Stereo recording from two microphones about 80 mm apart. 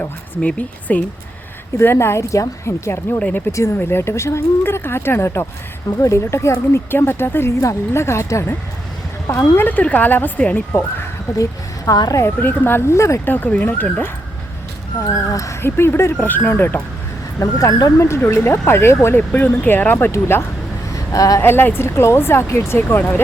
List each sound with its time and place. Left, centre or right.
0.0 s speech: centre
1.8 s speech: left
3.2 s speech: centre
3.8 s speech: left
9.6 s speech: left
11.9 s speech: left
12.2 s speech: left
13.3 s speech: left
15.0 s speech: left
15.6 s speech: left
17.4 s speech: left
20.1 s speech: left
20.9 s vehicle: left
21.4 s speech: left